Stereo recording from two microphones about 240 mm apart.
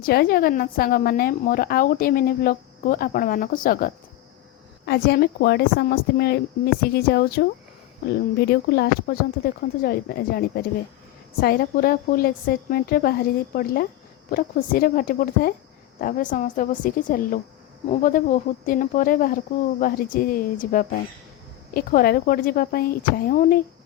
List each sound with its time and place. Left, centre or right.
0.0 s a woman's voice: left